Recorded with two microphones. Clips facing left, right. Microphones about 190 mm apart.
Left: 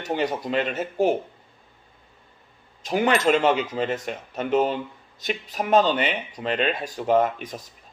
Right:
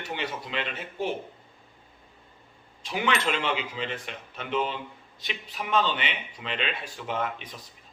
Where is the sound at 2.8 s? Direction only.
45° left (ahead or behind).